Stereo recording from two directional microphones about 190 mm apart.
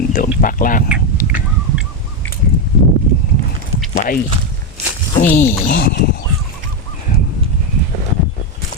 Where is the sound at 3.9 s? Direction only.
50° left (ahead or behind).